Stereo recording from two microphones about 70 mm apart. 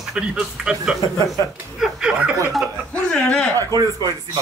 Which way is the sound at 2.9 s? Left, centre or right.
Centre.